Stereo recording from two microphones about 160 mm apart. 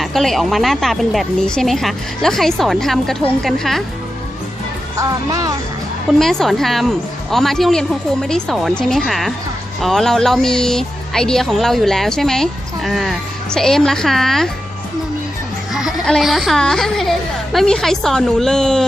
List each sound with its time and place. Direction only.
0.0 s speech: centre (ahead or behind)
4.9 s speech: 20° right (ahead or behind)
6.1 s speech: centre (ahead or behind)
15.7 s speech: centre (ahead or behind)